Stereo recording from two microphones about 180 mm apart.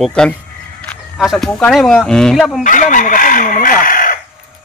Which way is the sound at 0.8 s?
Centre (ahead or behind).